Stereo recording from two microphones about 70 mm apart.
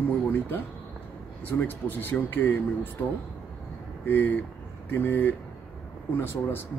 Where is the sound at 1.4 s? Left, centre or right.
Left.